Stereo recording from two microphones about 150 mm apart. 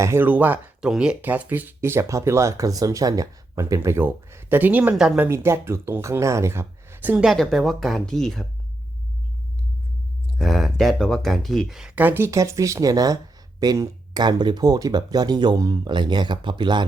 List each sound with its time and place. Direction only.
0.0 s speech: 15° right (ahead or behind)
7.3 s speech: centre (ahead or behind)
10.3 s speech: centre (ahead or behind); by 16.8 s 30° right (ahead or behind)